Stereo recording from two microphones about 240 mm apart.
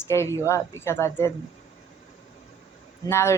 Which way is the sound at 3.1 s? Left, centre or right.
Centre.